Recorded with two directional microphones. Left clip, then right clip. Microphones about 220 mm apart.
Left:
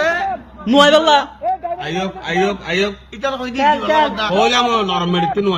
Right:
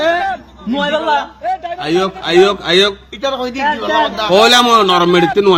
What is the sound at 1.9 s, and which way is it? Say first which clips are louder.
A man's voice: right 11 dB; 45° right (ahead or behind).